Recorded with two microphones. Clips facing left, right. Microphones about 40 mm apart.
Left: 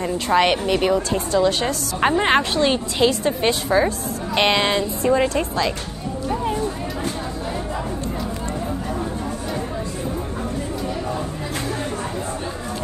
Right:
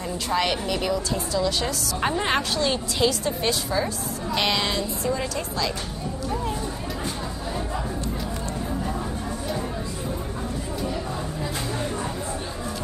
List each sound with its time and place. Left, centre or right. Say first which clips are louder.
0.3 s a woman's voice: left 7 dB; left